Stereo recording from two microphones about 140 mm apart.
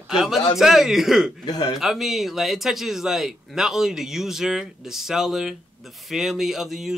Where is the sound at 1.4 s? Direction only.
30° left (ahead or behind).